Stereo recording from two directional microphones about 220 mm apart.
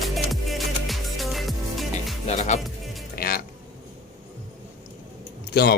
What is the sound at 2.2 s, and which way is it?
Music, 30° left (ahead or behind).